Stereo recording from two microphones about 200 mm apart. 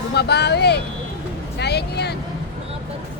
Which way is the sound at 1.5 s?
55° left (ahead or behind).